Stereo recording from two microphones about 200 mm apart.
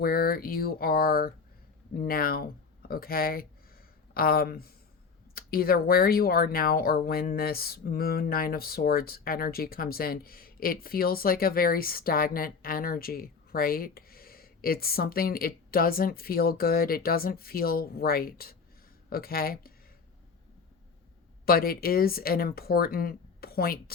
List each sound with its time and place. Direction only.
0.0 s speech: 50° left (ahead or behind)
21.4 s speech: 50° left (ahead or behind)